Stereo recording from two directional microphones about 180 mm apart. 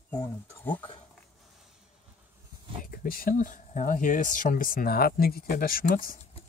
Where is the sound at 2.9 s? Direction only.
50° left (ahead or behind).